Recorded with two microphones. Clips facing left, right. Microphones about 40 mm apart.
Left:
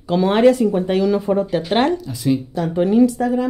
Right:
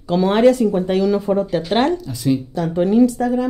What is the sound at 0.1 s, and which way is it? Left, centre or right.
Speech, centre.